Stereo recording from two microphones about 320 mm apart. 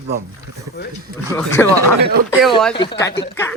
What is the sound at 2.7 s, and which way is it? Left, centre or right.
Speech, centre.